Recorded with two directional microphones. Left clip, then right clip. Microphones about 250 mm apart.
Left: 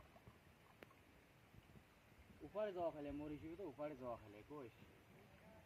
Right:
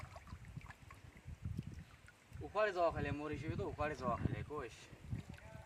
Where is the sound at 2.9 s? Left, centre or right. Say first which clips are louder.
Right 8 dB; right.